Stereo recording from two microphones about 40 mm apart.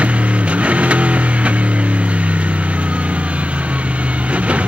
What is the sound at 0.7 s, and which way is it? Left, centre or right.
Music, right.